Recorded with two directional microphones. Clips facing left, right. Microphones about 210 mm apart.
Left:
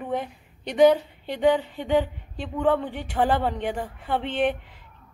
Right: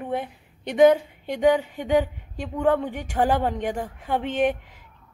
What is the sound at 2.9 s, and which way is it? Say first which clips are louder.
Speech: right 1 dB; 45° right (ahead or behind).